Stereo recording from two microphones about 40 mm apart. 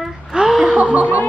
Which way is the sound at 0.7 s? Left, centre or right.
Right.